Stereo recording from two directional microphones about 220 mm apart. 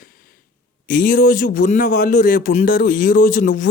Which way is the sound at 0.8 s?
40° left (ahead or behind).